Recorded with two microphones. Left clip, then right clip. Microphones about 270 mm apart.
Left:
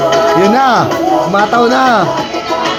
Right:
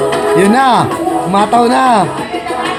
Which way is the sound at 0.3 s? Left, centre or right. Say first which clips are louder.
Even; right.